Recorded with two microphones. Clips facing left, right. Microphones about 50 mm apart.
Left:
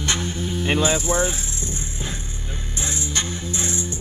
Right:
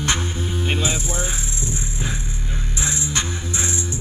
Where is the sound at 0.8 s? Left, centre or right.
Left.